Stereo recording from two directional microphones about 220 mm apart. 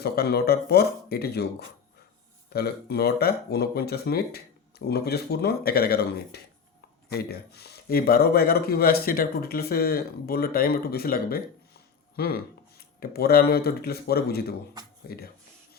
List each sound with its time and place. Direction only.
0.0 s speech: 45° left (ahead or behind)